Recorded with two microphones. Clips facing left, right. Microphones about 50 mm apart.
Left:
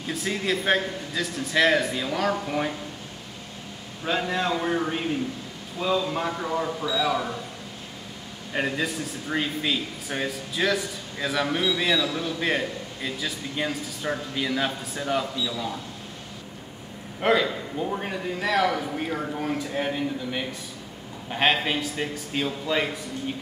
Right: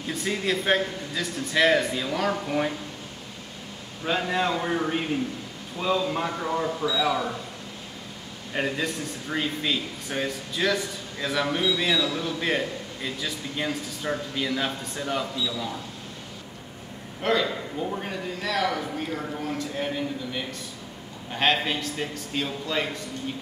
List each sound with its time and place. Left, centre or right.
0.0 s speech: centre
4.0 s speech: centre
8.5 s speech: centre
17.2 s a man's voice: centre